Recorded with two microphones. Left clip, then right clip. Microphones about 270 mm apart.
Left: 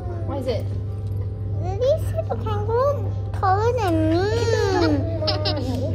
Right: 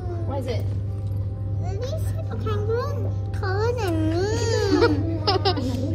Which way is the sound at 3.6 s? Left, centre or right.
Left.